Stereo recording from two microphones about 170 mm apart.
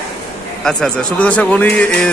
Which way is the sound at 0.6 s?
5° left (ahead or behind).